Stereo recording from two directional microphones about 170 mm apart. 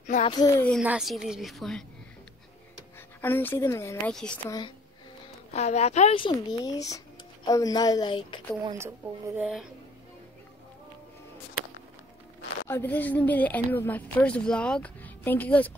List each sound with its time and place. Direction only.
0.0 s speech: 45° left (ahead or behind)
0.3 s a woman's voice: 20° left (ahead or behind)
0.8 s a woman's voice: centre (ahead or behind)
3.2 s speech: 10° left (ahead or behind)
4.1 s a woman's voice: 5° left (ahead or behind)
4.5 s a woman's voice: 25° left (ahead or behind)
5.5 s a woman's voice: 40° left (ahead or behind)
8.7 s speech: 15° right (ahead or behind)
12.6 s speech: 15° left (ahead or behind)